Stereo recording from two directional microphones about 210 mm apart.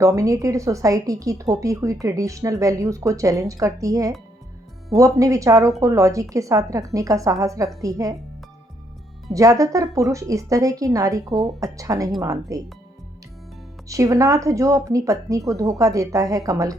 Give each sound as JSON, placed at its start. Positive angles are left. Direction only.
{"t": 0.0, "sound": "a woman's voice", "side_deg": -15}
{"t": 9.3, "sound": "a woman's voice", "side_deg": -15}
{"t": 13.8, "sound": "a woman's voice", "side_deg": -15}